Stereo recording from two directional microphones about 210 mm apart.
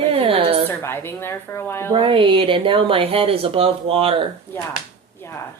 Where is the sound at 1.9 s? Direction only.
25° right (ahead or behind).